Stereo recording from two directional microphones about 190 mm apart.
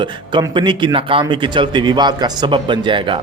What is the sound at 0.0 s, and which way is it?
Speech, 25° right (ahead or behind).